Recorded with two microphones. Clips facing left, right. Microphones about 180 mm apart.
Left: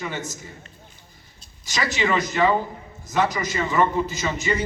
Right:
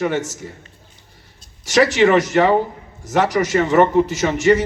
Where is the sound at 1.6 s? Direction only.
75° right (ahead or behind).